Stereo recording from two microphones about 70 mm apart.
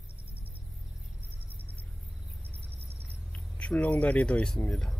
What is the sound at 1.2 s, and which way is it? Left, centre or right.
Vehicle, right.